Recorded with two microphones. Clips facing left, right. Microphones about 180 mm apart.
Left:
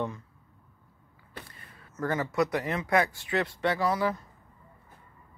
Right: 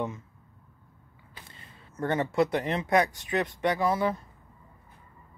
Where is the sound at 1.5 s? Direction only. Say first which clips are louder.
Right 1 dB; 25° right (ahead or behind).